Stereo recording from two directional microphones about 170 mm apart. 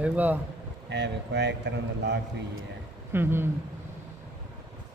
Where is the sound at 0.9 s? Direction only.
90° right.